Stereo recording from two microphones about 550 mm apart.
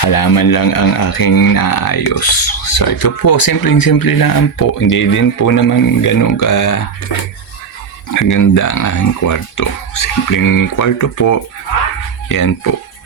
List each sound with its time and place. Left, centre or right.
0.0 s speech: left
8.1 s speech: left